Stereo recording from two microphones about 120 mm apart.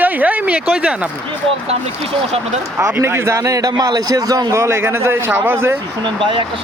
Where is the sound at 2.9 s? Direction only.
20° right (ahead or behind).